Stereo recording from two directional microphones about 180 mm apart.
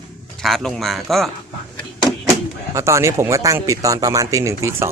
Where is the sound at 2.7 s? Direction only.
15° right (ahead or behind).